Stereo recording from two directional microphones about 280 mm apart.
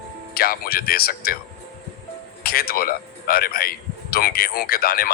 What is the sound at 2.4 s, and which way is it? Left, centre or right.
Speech, left.